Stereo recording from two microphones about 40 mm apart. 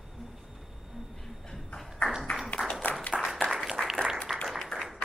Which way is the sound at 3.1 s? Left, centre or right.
Centre.